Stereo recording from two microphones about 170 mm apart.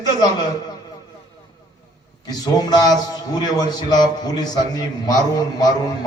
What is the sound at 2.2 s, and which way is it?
A man's voice, 25° left (ahead or behind).